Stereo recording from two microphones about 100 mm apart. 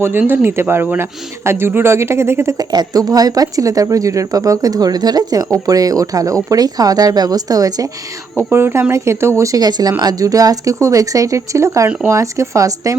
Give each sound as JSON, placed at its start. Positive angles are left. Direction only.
{"t": 0.0, "sound": "speech", "side_deg": -20}
{"t": 2.6, "sound": "speech", "side_deg": -40}
{"t": 8.4, "sound": "speech", "side_deg": -25}